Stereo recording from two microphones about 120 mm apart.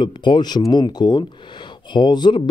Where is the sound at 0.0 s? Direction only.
40° left (ahead or behind).